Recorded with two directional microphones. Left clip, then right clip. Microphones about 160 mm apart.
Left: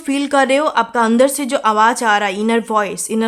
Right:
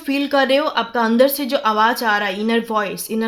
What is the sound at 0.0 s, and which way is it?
A woman's voice, 25° left (ahead or behind).